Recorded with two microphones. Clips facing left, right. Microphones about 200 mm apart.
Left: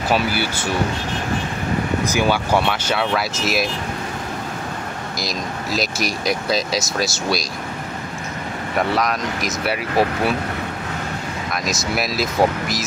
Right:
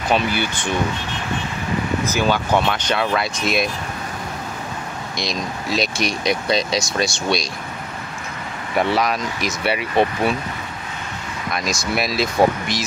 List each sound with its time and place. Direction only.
0.1 s speech: 5° left (ahead or behind)
2.0 s speech: 10° left (ahead or behind)
5.2 s speech: centre (ahead or behind)
8.7 s speech: centre (ahead or behind)
11.5 s speech: centre (ahead or behind)